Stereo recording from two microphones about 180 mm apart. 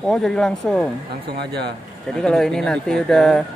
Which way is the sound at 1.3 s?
65° right (ahead or behind).